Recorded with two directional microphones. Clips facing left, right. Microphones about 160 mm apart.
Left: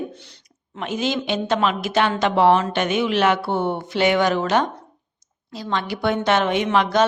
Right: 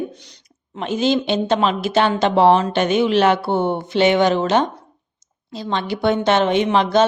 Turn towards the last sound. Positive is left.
turn(degrees=-25)  # may be behind; listen again after turning